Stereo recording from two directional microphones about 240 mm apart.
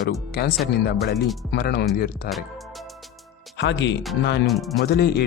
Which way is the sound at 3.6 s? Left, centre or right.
Left.